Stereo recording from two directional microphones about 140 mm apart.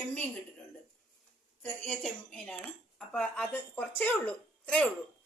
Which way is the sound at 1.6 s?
5° left (ahead or behind).